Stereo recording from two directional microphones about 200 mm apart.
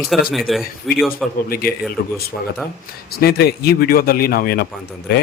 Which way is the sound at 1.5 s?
50° left (ahead or behind).